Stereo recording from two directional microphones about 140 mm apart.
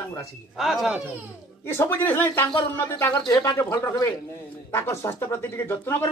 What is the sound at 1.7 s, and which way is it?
Speech, 15° left (ahead or behind).